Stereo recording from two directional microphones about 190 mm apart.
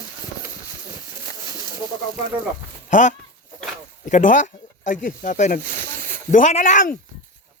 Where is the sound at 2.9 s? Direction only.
40° left (ahead or behind).